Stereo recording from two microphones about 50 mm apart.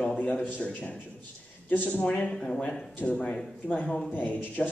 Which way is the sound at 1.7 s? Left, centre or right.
Left.